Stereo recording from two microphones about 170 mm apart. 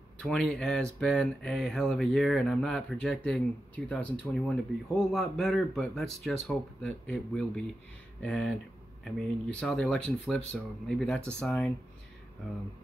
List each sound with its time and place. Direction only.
0.2 s speech: 5° left (ahead or behind)
9.6 s speech: 5° left (ahead or behind)